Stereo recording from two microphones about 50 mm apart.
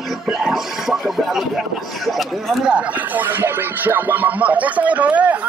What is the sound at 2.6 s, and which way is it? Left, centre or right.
Speech, right.